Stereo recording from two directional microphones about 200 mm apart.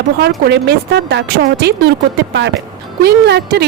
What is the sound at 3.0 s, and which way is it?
Speech, 55° right (ahead or behind).